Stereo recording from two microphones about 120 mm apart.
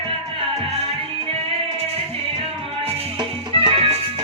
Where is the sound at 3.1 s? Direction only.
45° right (ahead or behind).